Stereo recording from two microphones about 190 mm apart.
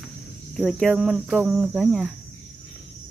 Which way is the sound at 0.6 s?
Centre (ahead or behind).